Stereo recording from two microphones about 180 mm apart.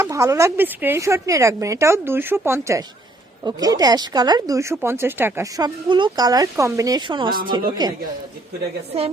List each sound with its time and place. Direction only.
0.0 s speech: 15° right (ahead or behind)